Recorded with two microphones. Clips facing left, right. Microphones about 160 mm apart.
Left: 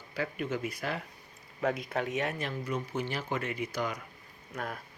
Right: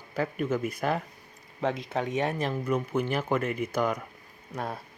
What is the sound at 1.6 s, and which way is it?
Speech, 25° right (ahead or behind).